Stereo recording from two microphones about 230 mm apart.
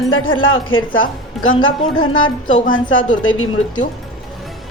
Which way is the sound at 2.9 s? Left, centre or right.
Left.